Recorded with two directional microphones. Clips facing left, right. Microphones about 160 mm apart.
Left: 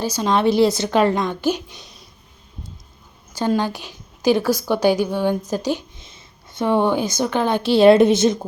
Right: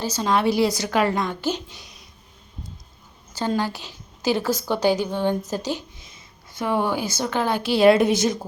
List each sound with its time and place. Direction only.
0.0 s a woman's voice: 15° left (ahead or behind)
3.3 s a woman's voice: 15° left (ahead or behind)
6.0 s speech: 25° left (ahead or behind)